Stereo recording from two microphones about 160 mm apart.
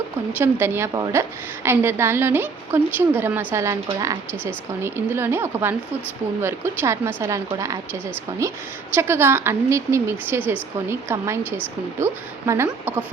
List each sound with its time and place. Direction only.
0.3 s a woman's voice: 15° right (ahead or behind)